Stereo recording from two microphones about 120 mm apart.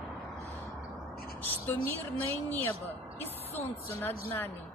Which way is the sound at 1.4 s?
15° left (ahead or behind).